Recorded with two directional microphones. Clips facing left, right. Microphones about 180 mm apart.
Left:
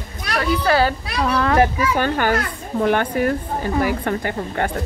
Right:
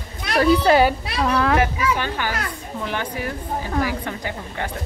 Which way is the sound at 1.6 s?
50° left (ahead or behind).